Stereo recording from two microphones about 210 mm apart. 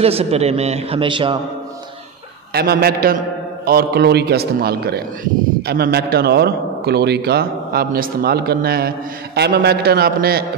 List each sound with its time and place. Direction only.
0.0 s a man's voice: 30° right (ahead or behind)
2.5 s a man's voice: 50° right (ahead or behind)